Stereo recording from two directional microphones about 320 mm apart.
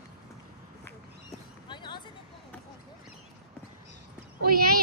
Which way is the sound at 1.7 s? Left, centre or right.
Centre.